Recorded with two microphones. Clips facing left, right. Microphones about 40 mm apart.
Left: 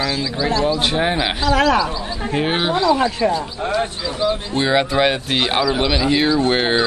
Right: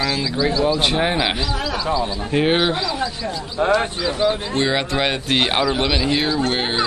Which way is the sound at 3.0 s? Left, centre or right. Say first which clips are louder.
Left 7 dB; left.